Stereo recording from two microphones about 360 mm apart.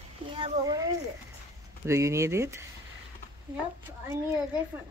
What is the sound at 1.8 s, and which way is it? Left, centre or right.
Speech, centre.